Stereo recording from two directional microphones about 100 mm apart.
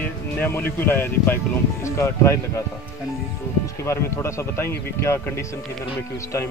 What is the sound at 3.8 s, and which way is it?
Speech, 30° left (ahead or behind).